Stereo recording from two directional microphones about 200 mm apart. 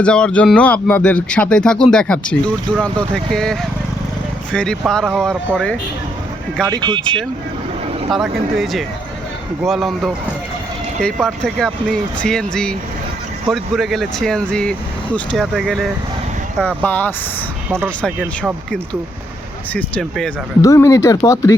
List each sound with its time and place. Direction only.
0.0 s speech: 5° left (ahead or behind)
6.7 s speech: 20° right (ahead or behind)
7.0 s speech: 5° left (ahead or behind)
19.7 s speech: 5° left (ahead or behind)
20.6 s speech: 15° left (ahead or behind)